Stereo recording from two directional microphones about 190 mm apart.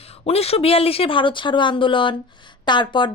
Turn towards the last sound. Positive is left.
turn(degrees=25)  # may be behind; listen again after turning